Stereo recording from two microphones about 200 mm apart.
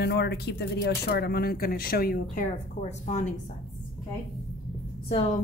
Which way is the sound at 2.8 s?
35° left (ahead or behind).